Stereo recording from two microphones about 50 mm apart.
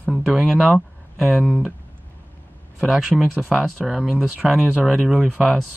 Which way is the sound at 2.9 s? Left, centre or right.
Centre.